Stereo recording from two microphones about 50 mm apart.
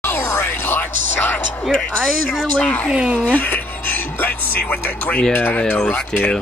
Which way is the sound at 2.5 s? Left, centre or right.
Left.